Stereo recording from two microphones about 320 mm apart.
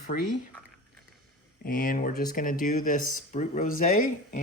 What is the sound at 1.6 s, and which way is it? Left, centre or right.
Speech, left.